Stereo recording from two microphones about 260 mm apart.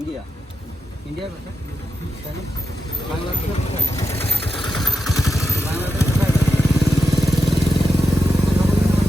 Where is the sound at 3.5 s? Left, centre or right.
Left.